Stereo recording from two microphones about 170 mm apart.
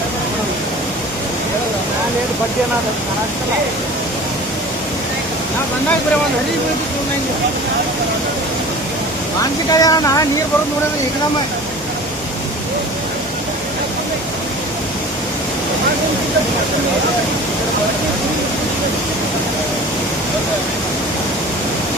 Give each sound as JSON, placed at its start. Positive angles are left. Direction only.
{"t": 9.7, "sound": "speech", "side_deg": 20}